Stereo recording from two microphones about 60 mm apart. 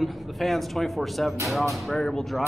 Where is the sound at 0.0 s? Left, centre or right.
Centre.